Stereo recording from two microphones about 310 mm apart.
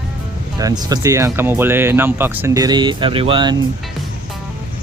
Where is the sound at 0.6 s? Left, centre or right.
Centre.